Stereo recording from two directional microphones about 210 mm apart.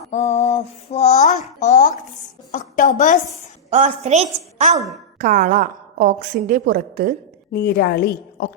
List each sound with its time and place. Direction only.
0.1 s a sound: 30° left (ahead or behind)
3.7 s a woman's voice: 35° right (ahead or behind)
7.5 s a woman's voice: 50° left (ahead or behind)